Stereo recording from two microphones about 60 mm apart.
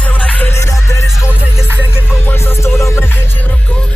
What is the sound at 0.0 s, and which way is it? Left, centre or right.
Music, left.